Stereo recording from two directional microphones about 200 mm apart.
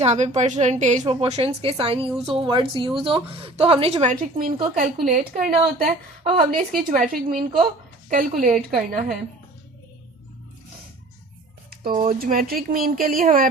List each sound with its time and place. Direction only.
0.0 s a woman's voice: 35° right (ahead or behind)
1.0 s a woman's voice: 25° right (ahead or behind); by 9.1 s 40° right (ahead or behind)
11.9 s a woman's voice: 45° right (ahead or behind)